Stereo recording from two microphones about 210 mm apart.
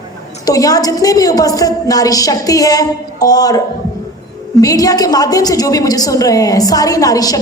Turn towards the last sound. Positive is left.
turn(degrees=15)  # may be behind; listen again after turning